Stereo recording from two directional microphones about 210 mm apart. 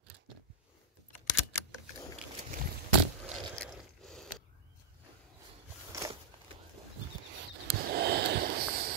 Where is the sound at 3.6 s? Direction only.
Centre (ahead or behind).